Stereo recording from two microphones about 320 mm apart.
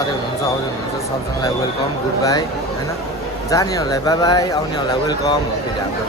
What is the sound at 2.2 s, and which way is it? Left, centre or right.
Speech, centre.